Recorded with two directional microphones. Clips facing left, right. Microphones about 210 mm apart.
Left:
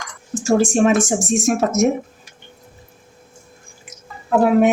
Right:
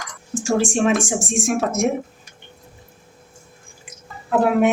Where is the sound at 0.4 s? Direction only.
40° left (ahead or behind).